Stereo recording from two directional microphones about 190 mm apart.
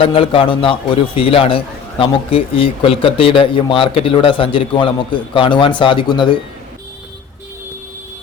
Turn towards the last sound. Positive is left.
turn(degrees=25)  # may be behind; listen again after turning